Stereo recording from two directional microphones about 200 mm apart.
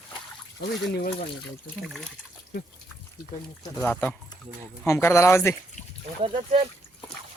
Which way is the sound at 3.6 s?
10° left (ahead or behind).